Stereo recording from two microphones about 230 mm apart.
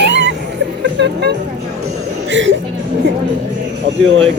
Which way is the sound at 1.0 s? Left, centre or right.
Right.